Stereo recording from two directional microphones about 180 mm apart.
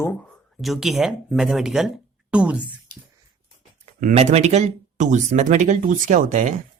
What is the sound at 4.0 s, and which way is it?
Speech, 40° right (ahead or behind).